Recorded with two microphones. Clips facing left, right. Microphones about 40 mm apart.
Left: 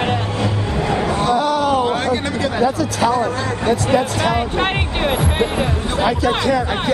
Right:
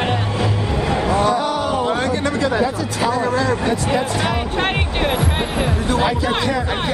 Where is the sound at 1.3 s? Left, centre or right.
Left.